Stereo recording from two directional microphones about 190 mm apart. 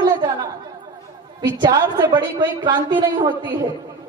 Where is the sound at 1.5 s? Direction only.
25° right (ahead or behind).